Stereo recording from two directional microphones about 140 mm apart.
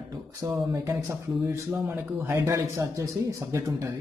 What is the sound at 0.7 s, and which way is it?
Speech, 25° right (ahead or behind).